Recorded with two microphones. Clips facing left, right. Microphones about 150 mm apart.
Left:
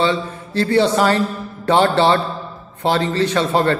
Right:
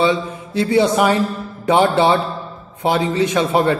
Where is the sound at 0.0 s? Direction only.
10° right (ahead or behind).